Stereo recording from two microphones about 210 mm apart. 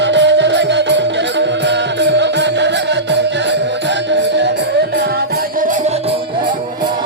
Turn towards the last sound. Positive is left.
turn(degrees=-40)  # may be behind; listen again after turning